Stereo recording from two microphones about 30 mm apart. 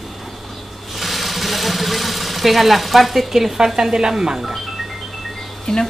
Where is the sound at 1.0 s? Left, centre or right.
Centre.